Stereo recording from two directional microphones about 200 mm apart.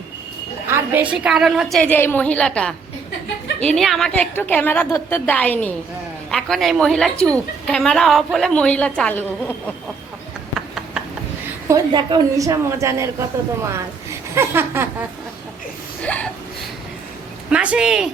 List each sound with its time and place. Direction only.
0.7 s a woman's voice: 10° right (ahead or behind)
1.8 s a woman's voice: 10° left (ahead or behind)
11.7 s a woman's voice: 25° right (ahead or behind)
16.0 s a sound: 5° left (ahead or behind)
17.5 s a woman's voice: 5° right (ahead or behind)